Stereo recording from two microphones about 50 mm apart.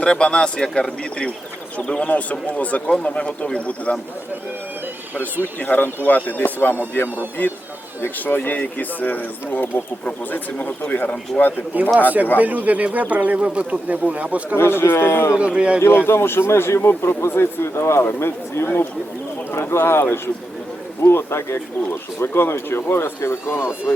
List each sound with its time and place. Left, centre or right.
0.0 s speech: centre
1.9 s speech: left
5.5 s speech: left
11.7 s speech: right
14.5 s speech: left
15.4 s speech: right
16.0 s a man's voice: left